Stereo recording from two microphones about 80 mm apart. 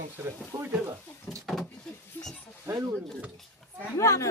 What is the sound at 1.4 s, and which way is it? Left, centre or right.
Door, centre.